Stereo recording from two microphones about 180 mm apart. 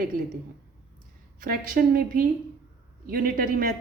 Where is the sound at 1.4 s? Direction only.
55° right (ahead or behind).